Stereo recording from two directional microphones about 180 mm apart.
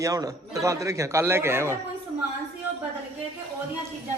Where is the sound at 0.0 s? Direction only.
20° right (ahead or behind).